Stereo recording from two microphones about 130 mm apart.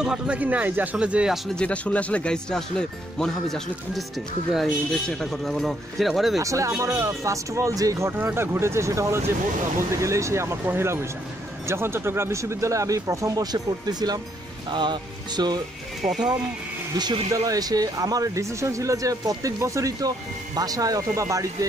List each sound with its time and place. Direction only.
0.0 s speech: 5° right (ahead or behind)
1.5 s speech: 10° left (ahead or behind)
4.6 s speech: 5° left (ahead or behind)
6.3 s speech: 25° right (ahead or behind)
8.1 s speech: 15° right (ahead or behind); by 15.6 s 35° right (ahead or behind)
17.0 s speech: 30° right (ahead or behind)